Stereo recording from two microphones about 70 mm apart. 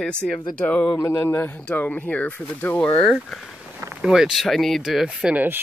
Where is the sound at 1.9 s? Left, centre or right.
Centre.